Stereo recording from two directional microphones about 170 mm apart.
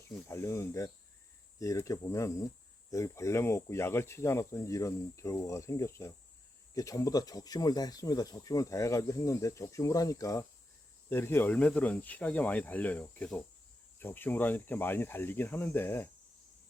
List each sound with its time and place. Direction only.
0.3 s speech: 15° left (ahead or behind)